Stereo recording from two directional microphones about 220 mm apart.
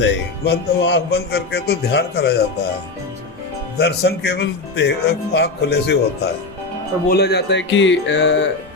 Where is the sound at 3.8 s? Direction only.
50° left (ahead or behind).